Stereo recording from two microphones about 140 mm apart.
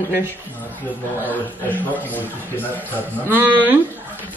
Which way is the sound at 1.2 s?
10° left (ahead or behind).